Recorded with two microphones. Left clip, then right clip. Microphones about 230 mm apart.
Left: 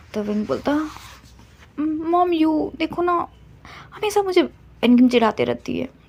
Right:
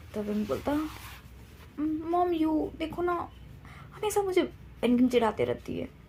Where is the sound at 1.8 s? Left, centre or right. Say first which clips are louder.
Left 9 dB; left.